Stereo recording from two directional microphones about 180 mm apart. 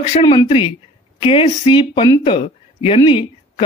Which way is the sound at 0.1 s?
25° left (ahead or behind).